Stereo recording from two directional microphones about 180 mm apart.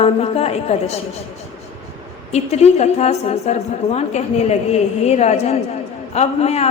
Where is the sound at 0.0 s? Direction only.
35° left (ahead or behind).